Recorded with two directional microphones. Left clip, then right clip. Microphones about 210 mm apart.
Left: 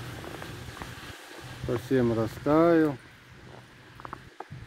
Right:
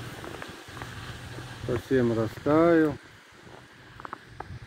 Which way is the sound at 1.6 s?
5° left (ahead or behind).